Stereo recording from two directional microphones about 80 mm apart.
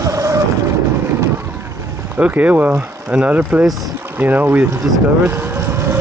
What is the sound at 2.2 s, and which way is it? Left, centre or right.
Speech, centre.